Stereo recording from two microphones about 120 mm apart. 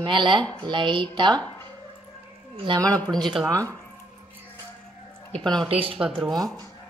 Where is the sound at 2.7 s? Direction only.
45° right (ahead or behind).